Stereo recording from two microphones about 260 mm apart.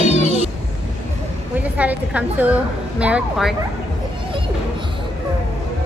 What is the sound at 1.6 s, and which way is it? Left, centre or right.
A woman's voice, centre.